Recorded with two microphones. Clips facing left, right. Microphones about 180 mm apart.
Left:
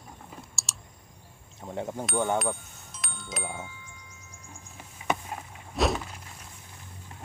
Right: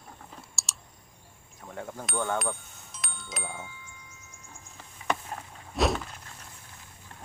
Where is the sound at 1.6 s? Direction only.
20° left (ahead or behind).